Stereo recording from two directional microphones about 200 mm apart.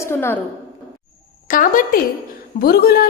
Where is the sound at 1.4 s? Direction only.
45° left (ahead or behind).